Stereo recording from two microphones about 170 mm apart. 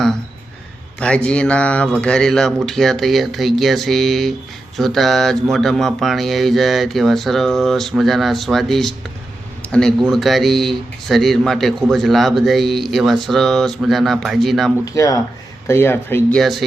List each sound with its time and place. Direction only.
0.9 s speech: 5° left (ahead or behind)
14.9 s speech: 20° left (ahead or behind)
16.4 s speech: centre (ahead or behind)